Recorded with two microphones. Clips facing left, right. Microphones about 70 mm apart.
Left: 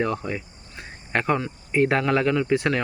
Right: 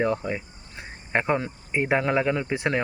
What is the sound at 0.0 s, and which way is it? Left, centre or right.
Cricket, right.